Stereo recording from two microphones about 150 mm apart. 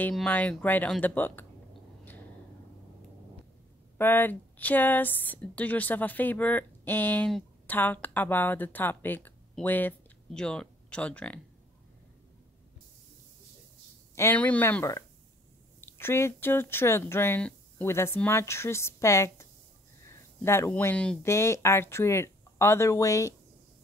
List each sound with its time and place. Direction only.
0.1 s speech: 5° left (ahead or behind)
4.0 s speech: 15° left (ahead or behind)
14.1 s speech: 15° left (ahead or behind)
21.3 s speech: 20° left (ahead or behind)